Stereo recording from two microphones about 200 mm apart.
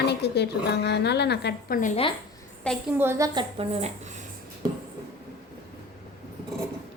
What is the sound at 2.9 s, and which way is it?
Speech, 10° right (ahead or behind).